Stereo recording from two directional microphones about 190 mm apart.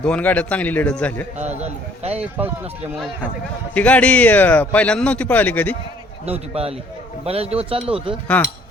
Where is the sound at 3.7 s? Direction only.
5° left (ahead or behind).